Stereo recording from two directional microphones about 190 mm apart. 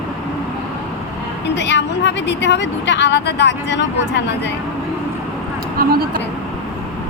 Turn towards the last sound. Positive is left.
turn(degrees=-50)  # may be behind; listen again after turning